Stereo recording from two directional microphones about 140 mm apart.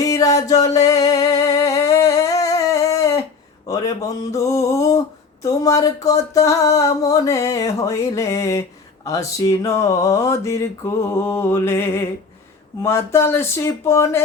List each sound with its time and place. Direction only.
0.0 s music: 25° left (ahead or behind)
0.9 s a sound: 25° left (ahead or behind)
13.1 s speech: 15° left (ahead or behind)